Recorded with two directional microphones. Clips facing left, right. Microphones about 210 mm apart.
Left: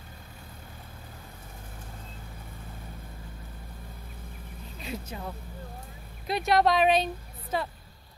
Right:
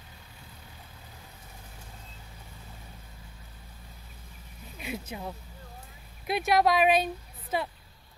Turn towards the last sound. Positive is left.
turn(degrees=-10)  # may be behind; listen again after turning